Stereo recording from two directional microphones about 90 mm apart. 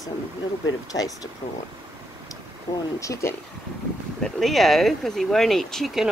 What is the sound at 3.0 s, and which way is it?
Speech, 35° left (ahead or behind).